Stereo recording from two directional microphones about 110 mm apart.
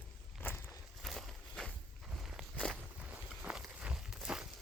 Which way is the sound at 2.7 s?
15° right (ahead or behind).